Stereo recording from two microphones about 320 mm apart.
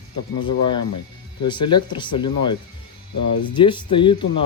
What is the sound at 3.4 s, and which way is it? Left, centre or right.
Speech, centre.